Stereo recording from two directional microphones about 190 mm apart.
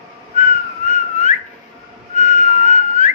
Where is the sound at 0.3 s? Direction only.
40° left (ahead or behind).